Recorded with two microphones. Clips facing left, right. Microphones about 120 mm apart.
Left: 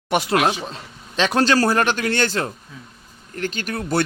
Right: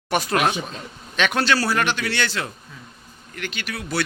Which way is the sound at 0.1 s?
20° left (ahead or behind).